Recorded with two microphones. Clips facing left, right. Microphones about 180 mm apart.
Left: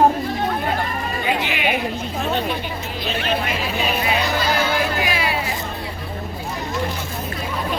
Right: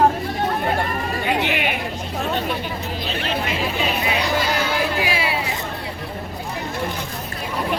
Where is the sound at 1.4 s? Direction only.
60° right (ahead or behind).